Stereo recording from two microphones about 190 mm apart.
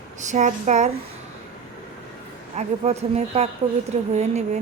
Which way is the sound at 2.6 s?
35° right (ahead or behind).